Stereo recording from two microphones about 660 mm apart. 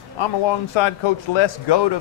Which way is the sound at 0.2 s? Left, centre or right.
Left.